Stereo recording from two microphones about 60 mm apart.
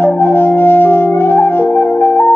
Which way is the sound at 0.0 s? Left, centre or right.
Left.